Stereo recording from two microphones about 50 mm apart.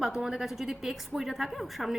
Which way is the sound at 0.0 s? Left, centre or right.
Centre.